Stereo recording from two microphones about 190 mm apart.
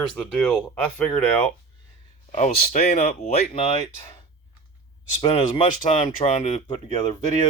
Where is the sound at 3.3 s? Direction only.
30° left (ahead or behind).